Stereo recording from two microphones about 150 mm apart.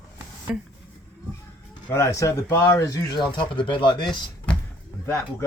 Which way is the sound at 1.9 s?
20° left (ahead or behind).